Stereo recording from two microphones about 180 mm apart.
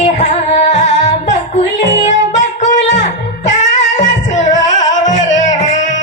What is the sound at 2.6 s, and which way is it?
Music, 45° left (ahead or behind).